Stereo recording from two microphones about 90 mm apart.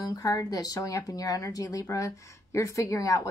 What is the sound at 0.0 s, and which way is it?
A woman's voice, 40° left (ahead or behind).